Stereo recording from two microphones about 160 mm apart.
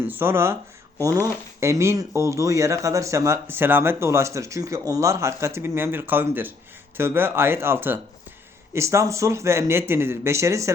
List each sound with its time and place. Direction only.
0.0 s speech: 15° right (ahead or behind)